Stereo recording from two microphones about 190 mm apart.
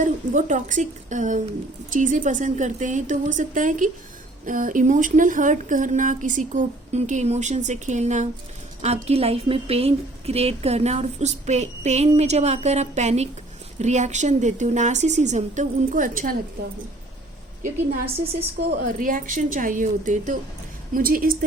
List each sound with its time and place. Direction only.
0.0 s a woman's voice: 40° right (ahead or behind)
17.6 s speech: 50° right (ahead or behind)